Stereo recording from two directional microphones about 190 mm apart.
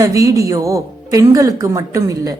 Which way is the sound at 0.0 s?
15° right (ahead or behind).